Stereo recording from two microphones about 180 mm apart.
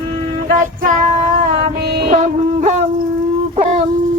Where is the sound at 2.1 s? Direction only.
40° right (ahead or behind).